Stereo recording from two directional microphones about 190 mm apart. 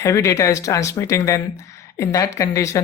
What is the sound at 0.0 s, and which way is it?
Speech, 15° left (ahead or behind).